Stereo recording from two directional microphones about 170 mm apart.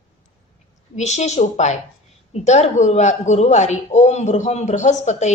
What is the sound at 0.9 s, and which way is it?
Speech, 40° left (ahead or behind).